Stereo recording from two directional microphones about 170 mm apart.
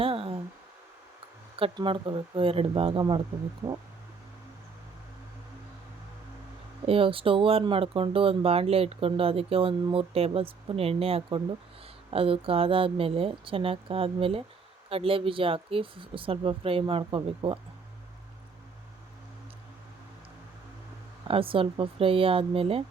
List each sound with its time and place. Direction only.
0.0 s a sound: 35° right (ahead or behind)
1.5 s speech: 30° right (ahead or behind)
3.6 s speech: 15° right (ahead or behind)
6.8 s speech: 35° right (ahead or behind)
21.2 s speech: 30° right (ahead or behind)